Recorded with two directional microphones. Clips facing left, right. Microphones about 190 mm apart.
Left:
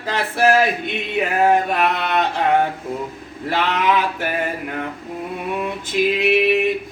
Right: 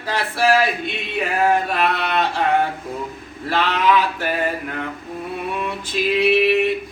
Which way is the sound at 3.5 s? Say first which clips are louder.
Right 1 dB; 15° left (ahead or behind).